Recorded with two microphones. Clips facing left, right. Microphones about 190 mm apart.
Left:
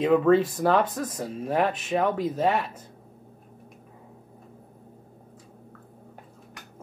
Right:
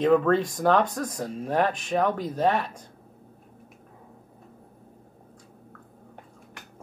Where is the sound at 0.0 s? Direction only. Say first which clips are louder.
Left 1 dB; 5° left (ahead or behind).